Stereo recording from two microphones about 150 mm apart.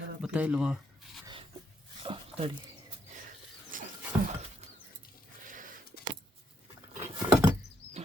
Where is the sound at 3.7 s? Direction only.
65° right (ahead or behind).